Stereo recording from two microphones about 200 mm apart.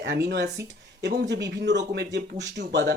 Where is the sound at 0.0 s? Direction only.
55° right (ahead or behind).